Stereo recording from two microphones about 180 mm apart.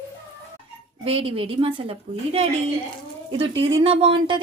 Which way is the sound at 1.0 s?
30° right (ahead or behind).